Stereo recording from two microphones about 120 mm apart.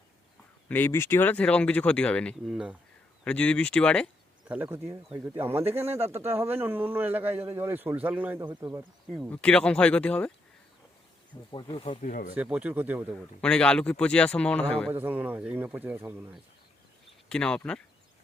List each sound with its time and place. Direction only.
0.7 s speech: 20° left (ahead or behind)
2.5 s speech: 5° right (ahead or behind)
3.2 s speech: 10° left (ahead or behind)
4.4 s speech: 15° right (ahead or behind)
9.3 s speech: 10° left (ahead or behind)
11.5 s speech: 40° left (ahead or behind)
11.9 s speech: 80° left
12.3 s speech: 10° right (ahead or behind)
13.4 s speech: 10° left (ahead or behind)
14.8 s speech: 15° right (ahead or behind)
17.2 s speech: 5° left (ahead or behind)